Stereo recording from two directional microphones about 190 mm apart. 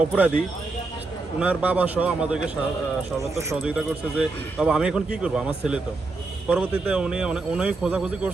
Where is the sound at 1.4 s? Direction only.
10° right (ahead or behind).